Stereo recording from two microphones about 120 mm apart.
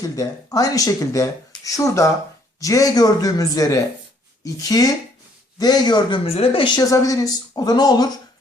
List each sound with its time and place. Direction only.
0.0 s speech: 30° left (ahead or behind)
6.2 s speech: 55° left (ahead or behind)
6.7 s speech: 30° left (ahead or behind)